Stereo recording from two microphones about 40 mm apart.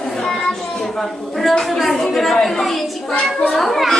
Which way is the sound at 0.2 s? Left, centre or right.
Centre.